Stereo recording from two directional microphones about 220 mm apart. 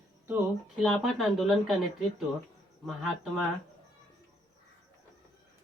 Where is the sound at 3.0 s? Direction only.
Centre (ahead or behind).